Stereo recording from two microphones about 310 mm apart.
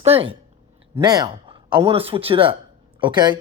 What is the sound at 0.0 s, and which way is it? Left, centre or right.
A woman's voice, centre.